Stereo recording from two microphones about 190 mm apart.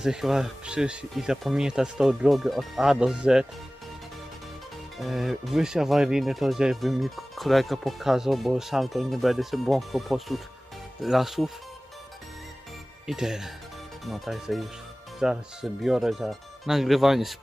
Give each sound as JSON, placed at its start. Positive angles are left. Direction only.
{"t": 0.0, "sound": "speech", "side_deg": -5}
{"t": 4.9, "sound": "speech", "side_deg": 0}
{"t": 13.1, "sound": "speech", "side_deg": -5}